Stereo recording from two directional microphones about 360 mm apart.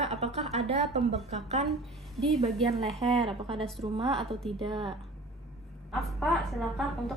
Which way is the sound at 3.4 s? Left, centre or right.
Centre.